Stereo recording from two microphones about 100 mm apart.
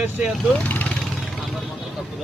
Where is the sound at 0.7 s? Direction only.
15° left (ahead or behind).